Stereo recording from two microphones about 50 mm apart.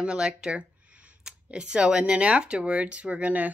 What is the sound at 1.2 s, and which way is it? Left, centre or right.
Speech, centre.